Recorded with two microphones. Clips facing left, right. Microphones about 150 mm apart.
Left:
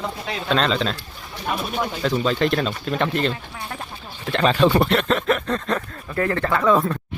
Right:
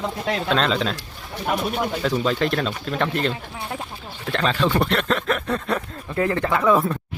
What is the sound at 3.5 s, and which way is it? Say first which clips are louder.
Speech: right 2 dB; 15° right (ahead or behind).